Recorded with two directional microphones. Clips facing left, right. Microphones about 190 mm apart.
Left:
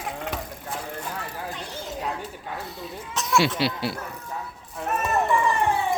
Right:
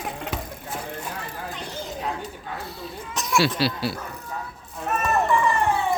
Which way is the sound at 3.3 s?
20° left (ahead or behind).